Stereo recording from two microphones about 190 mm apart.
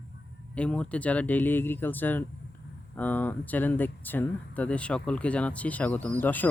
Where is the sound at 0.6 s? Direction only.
5° left (ahead or behind).